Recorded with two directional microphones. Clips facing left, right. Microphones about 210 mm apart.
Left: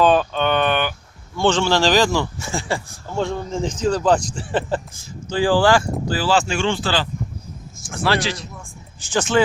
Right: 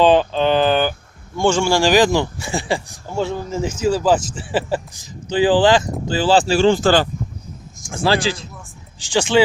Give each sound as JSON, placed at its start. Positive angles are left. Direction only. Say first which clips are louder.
{"t": 0.0, "sound": "speech", "louder": "right 3 dB", "side_deg": -25}
{"t": 1.4, "sound": "speech", "louder": "right 1 dB", "side_deg": -10}
{"t": 3.2, "sound": "speech", "louder": "right 1 dB", "side_deg": -5}
{"t": 4.9, "sound": "speech", "louder": "right 7 dB", "side_deg": -15}
{"t": 9.0, "sound": "speech", "louder": "right 3 dB", "side_deg": -15}